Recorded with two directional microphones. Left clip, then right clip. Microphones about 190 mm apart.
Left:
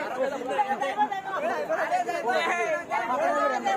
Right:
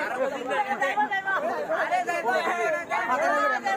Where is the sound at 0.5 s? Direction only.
20° right (ahead or behind).